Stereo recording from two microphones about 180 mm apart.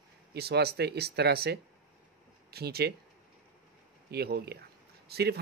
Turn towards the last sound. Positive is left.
turn(degrees=-65)  # may be behind; listen again after turning